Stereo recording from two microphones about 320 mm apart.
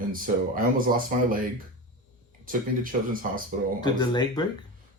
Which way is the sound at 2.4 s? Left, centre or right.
Right.